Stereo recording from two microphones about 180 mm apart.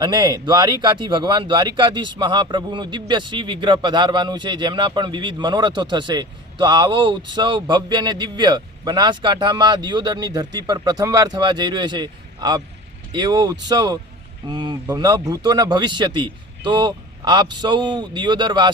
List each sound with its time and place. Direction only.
0.0 s speech: 25° right (ahead or behind)